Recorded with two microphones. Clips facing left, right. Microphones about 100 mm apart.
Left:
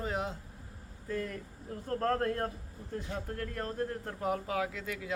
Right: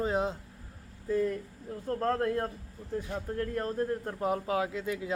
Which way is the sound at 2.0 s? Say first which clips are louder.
Right 2 dB; 15° right (ahead or behind).